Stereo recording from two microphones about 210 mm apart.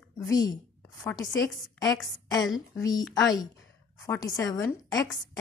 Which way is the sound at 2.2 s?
20° left (ahead or behind).